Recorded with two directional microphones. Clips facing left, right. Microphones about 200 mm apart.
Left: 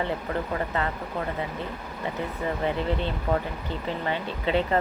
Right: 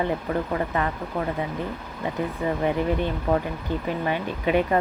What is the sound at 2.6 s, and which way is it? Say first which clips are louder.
A woman's voice: right 3 dB; 15° right (ahead or behind).